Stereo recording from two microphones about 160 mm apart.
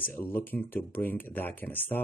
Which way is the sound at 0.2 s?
10° left (ahead or behind).